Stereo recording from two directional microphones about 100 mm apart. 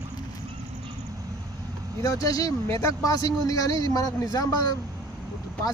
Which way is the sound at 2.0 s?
35° left (ahead or behind).